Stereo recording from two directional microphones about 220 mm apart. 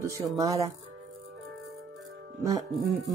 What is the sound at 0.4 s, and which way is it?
Speech, 15° right (ahead or behind).